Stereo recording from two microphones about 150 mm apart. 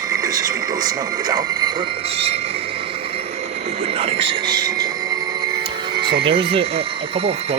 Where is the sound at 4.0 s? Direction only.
40° right (ahead or behind).